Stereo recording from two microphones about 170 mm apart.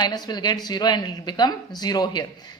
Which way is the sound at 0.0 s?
25° left (ahead or behind).